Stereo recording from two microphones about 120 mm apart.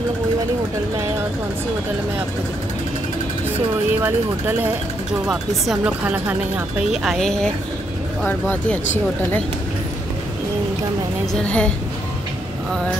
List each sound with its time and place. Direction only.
4.0 s speech: 15° right (ahead or behind)
5.2 s speech: 5° right (ahead or behind)
8.2 s speech: 15° left (ahead or behind)
11.4 s speech: 10° left (ahead or behind)